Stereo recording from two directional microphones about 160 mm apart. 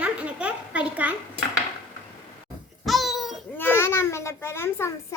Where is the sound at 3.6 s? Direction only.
15° left (ahead or behind).